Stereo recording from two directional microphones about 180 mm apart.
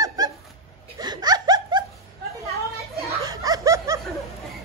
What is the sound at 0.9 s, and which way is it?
Laughter, 20° right (ahead or behind).